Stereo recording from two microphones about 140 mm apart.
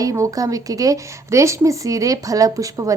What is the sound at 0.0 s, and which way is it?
A woman's voice, 25° right (ahead or behind).